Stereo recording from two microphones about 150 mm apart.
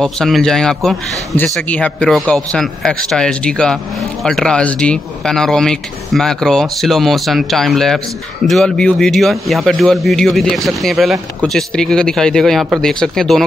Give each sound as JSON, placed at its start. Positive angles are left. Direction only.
{"t": 0.0, "sound": "speech", "side_deg": 0}